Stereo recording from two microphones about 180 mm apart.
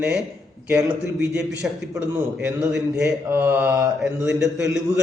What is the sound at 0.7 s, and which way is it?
A man's voice, 5° right (ahead or behind).